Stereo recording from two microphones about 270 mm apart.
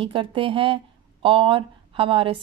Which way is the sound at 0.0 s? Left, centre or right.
Centre.